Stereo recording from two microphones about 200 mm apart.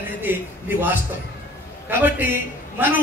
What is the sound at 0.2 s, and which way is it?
A man's voice, 10° right (ahead or behind).